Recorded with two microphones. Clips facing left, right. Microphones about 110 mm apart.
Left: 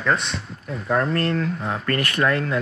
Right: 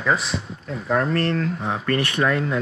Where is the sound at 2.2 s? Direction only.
10° right (ahead or behind).